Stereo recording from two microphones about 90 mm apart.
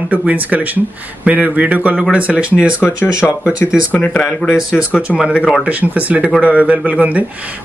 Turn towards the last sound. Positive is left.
turn(degrees=-15)  # may be behind; listen again after turning